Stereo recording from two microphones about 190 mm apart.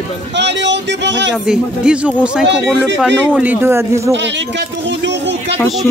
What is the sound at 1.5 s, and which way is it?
A man's voice, 5° right (ahead or behind).